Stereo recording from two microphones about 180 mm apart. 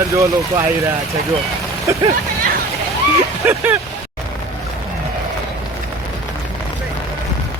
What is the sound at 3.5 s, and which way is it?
Speech, 10° right (ahead or behind).